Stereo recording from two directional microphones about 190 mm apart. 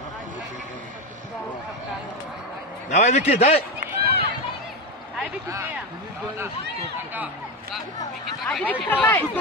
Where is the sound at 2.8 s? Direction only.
40° left (ahead or behind).